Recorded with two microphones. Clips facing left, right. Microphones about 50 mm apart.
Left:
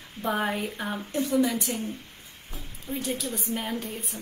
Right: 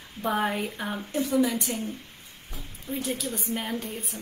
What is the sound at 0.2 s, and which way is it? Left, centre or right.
A woman's voice, centre.